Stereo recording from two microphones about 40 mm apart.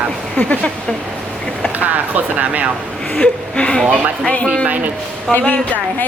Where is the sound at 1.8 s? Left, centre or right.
Right.